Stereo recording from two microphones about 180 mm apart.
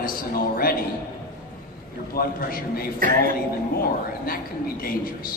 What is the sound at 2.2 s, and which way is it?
Speech, 55° left (ahead or behind).